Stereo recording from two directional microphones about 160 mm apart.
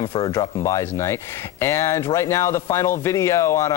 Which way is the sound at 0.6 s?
15° left (ahead or behind).